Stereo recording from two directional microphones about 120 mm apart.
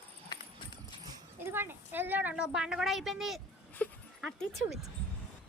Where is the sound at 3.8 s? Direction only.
10° left (ahead or behind).